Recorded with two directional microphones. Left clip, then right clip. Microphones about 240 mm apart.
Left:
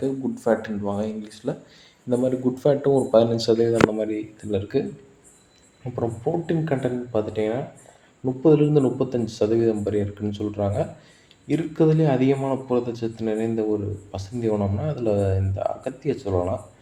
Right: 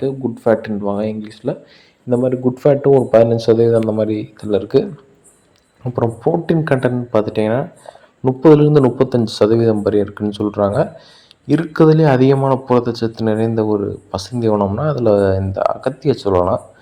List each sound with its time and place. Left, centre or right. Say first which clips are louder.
0.0 s speech: right 7 dB; right